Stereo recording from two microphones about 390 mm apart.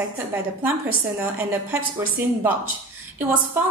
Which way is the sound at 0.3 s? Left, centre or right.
Centre.